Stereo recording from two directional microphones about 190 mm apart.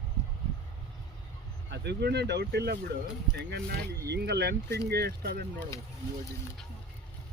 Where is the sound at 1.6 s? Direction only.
65° right (ahead or behind).